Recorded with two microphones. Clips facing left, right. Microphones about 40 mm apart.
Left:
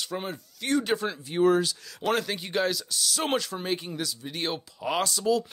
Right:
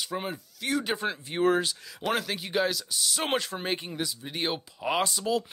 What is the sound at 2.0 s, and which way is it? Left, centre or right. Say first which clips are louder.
Speech: left 2 dB; centre.